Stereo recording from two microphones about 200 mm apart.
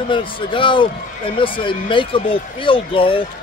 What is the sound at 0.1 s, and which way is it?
Speech, 25° left (ahead or behind).